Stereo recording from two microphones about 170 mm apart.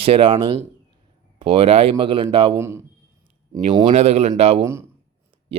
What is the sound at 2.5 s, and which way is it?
Speech, 15° right (ahead or behind).